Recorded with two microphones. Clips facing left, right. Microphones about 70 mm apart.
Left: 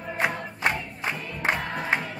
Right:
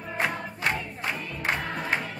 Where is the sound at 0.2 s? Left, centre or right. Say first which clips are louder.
Left 1 dB; centre.